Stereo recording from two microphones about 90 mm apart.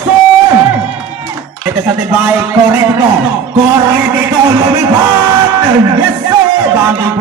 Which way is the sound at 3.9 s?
35° right (ahead or behind).